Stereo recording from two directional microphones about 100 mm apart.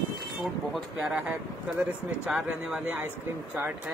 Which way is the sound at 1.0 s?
15° right (ahead or behind).